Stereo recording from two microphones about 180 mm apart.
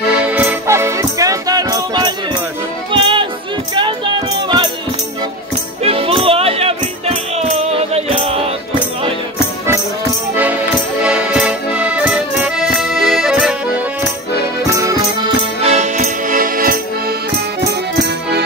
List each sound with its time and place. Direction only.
0.2 s music: 5° right (ahead or behind); by 4.6 s 25° right (ahead or behind)
5.8 s music: 30° right (ahead or behind)
10.3 s music: 10° right (ahead or behind)
11.1 s accordion: 5° right (ahead or behind)
15.6 s music: 40° right (ahead or behind)